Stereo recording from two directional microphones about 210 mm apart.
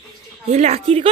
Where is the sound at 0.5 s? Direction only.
30° right (ahead or behind).